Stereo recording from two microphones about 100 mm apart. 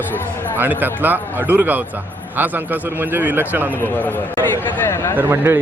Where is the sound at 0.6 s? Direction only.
20° right (ahead or behind).